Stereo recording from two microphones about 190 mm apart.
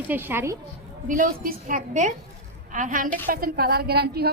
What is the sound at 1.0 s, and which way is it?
A woman's voice, 45° right (ahead or behind).